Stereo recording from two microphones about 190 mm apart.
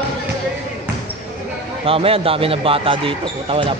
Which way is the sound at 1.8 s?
30° right (ahead or behind).